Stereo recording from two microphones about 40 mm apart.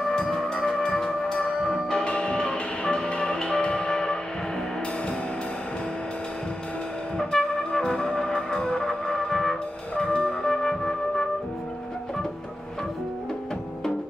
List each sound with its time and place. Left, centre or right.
0.1 s music: centre
2.0 s music: left
7.2 s brass instrument: centre
9.9 s music: left